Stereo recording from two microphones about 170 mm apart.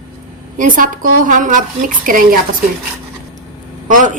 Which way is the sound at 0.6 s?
55° right (ahead or behind).